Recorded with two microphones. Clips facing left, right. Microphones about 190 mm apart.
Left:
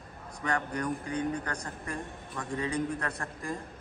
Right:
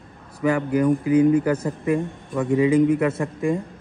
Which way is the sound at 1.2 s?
90° right.